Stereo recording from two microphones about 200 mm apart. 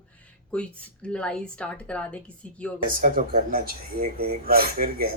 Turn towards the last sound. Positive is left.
turn(degrees=-45)  # may be behind; listen again after turning